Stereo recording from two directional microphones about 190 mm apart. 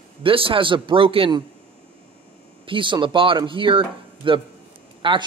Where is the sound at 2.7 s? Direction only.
25° right (ahead or behind).